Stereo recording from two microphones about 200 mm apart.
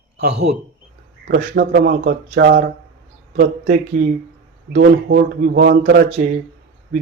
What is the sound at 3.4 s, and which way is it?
A man's voice, 40° right (ahead or behind).